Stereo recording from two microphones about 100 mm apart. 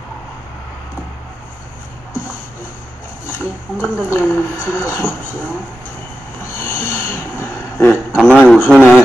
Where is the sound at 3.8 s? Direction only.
20° left (ahead or behind).